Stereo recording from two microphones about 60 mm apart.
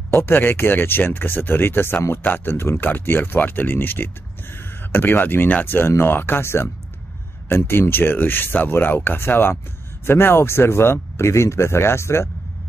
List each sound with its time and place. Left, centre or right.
0.1 s speech: left